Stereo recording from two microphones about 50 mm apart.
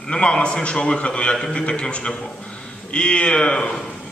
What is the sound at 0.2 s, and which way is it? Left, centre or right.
A man's voice, centre.